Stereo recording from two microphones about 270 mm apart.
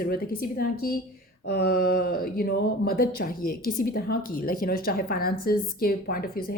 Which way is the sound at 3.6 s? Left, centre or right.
Left.